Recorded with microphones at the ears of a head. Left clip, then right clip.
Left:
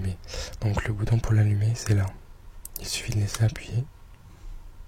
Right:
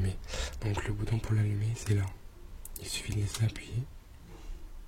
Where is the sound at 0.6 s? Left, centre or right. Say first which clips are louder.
Left 6 dB; left.